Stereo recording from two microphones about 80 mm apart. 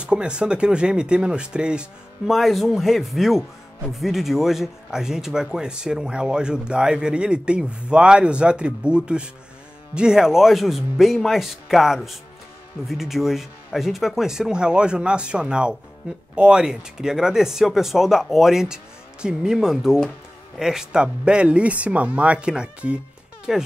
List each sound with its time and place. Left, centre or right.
0.0 s speech: centre